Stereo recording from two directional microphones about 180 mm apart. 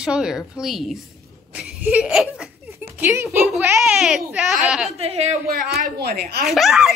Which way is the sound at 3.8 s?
Centre (ahead or behind).